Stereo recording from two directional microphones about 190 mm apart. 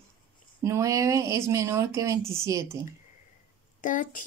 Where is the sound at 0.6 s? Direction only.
15° right (ahead or behind).